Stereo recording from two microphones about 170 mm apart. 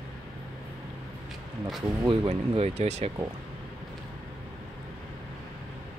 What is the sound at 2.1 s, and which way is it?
Speech, 35° right (ahead or behind).